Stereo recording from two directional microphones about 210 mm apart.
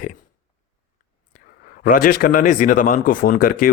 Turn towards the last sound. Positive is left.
turn(degrees=45)  # may be behind; listen again after turning